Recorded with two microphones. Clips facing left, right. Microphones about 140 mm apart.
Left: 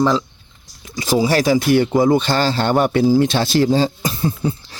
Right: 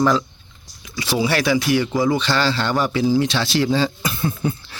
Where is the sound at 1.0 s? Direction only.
40° left (ahead or behind).